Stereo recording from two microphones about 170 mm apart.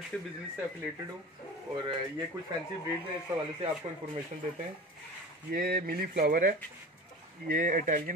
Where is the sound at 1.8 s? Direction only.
25° right (ahead or behind).